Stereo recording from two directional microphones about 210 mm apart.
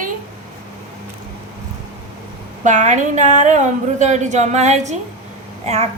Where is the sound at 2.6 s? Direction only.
35° right (ahead or behind).